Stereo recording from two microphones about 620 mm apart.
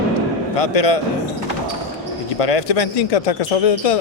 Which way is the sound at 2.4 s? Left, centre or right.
Left.